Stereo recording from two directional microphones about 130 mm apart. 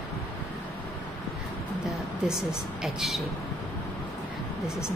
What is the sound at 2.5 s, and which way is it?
Speech, 5° right (ahead or behind).